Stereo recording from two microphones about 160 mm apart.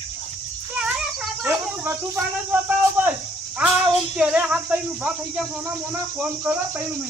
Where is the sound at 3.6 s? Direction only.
5° right (ahead or behind).